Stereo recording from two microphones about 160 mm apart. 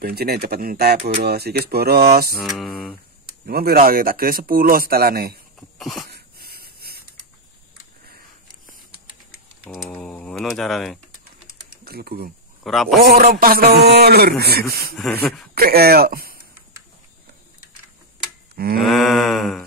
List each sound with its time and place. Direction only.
0.0 s a man's voice: 75° right (ahead or behind)
1.2 s speech: 85° right
2.4 s mantra: centre (ahead or behind)
3.4 s a man's voice: 70° right (ahead or behind)
5.8 s cough: centre (ahead or behind)
6.0 s a sound: 75° right (ahead or behind)
9.7 s a sound: 5° right (ahead or behind)
9.9 s mantra: 5° left (ahead or behind)
11.8 s speech: 75° right (ahead or behind)
12.6 s mantra: centre (ahead or behind)
13.0 s a man's voice: 70° right (ahead or behind)
15.0 s mantra: 5° left (ahead or behind)
15.5 s a man's voice: 75° right (ahead or behind)
18.8 s mantra: centre (ahead or behind)